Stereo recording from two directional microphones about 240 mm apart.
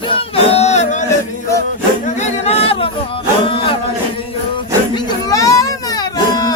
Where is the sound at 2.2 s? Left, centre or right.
Left.